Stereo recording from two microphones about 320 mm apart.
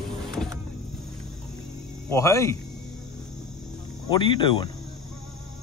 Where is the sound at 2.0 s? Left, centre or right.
Centre.